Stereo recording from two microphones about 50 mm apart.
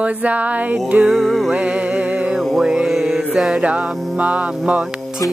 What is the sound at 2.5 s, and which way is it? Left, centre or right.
Music, centre.